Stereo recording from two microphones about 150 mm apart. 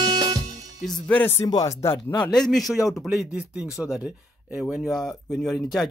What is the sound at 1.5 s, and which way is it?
Speech, 20° left (ahead or behind).